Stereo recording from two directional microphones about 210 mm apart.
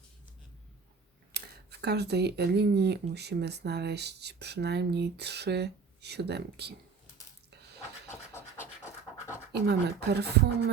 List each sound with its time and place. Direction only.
1.3 s speech: 50° right (ahead or behind)
8.5 s scratch: 15° left (ahead or behind)
9.5 s speech: 50° right (ahead or behind)